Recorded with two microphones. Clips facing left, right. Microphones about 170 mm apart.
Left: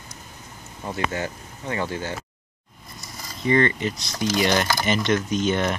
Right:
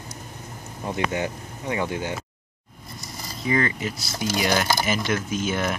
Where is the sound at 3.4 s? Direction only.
5° right (ahead or behind).